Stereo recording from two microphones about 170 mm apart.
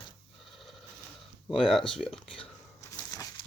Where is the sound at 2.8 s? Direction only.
20° left (ahead or behind).